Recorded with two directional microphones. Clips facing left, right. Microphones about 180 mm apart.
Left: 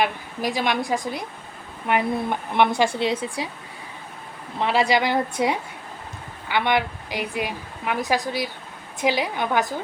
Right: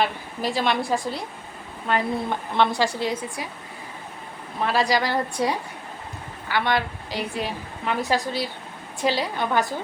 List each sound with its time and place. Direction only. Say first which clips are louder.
0.0 s a woman's voice: left 1 dB; 15° left (ahead or behind)
4.6 s a woman's voice: left 2 dB; 20° left (ahead or behind)